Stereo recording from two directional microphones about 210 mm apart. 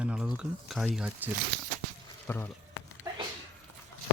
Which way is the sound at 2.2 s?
10° left (ahead or behind).